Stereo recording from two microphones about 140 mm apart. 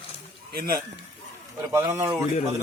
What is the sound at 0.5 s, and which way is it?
Speech, 90° right.